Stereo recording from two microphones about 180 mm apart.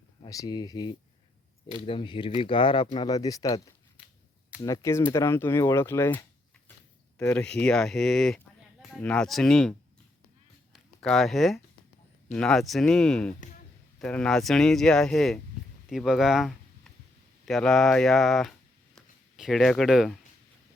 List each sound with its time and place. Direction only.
0.3 s speech: 20° left (ahead or behind)
4.6 s speech: 15° left (ahead or behind)
10.7 s a sound: centre (ahead or behind)
12.3 s speech: 5° left (ahead or behind)